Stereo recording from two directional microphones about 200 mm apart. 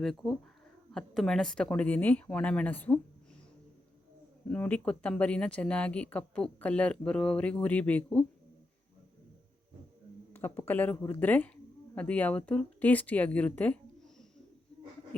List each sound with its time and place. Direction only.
0.0 s speech: centre (ahead or behind)
4.4 s speech: 5° left (ahead or behind)
10.3 s speech: 10° left (ahead or behind)